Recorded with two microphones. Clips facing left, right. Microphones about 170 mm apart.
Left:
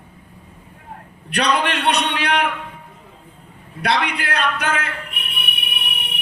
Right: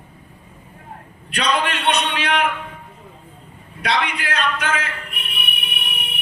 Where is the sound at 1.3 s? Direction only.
65° left (ahead or behind).